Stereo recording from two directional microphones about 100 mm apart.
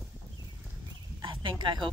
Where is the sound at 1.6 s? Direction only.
50° right (ahead or behind).